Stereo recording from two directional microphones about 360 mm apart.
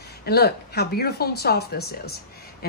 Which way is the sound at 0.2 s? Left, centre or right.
Left.